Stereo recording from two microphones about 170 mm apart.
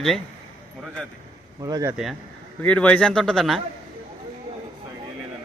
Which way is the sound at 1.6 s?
20° right (ahead or behind).